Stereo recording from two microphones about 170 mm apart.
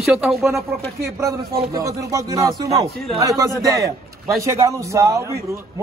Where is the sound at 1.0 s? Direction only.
20° right (ahead or behind).